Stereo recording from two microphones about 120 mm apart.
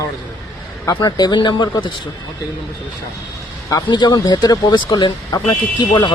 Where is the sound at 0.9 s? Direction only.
35° left (ahead or behind).